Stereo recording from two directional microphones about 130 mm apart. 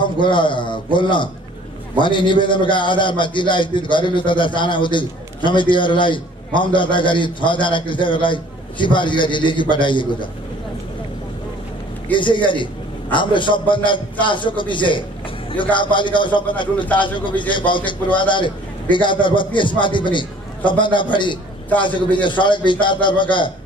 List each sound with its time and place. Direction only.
0.0 s a man's voice: 40° left (ahead or behind)
12.1 s a man's voice: 40° left (ahead or behind)
17.5 s a man's voice: 40° left (ahead or behind)